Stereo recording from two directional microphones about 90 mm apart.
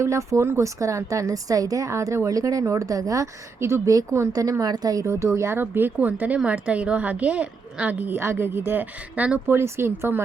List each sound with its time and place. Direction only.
0.0 s a woman's voice: 35° right (ahead or behind); by 9.6 s 15° right (ahead or behind)
9.6 s a woman's voice: 30° right (ahead or behind)